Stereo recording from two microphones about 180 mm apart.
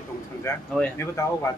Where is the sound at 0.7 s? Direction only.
5° left (ahead or behind).